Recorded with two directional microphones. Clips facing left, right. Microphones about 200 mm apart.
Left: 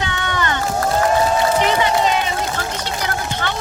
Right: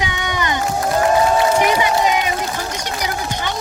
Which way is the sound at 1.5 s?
10° right (ahead or behind).